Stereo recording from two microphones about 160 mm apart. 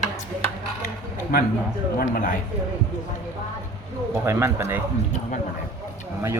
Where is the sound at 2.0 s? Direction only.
60° left (ahead or behind).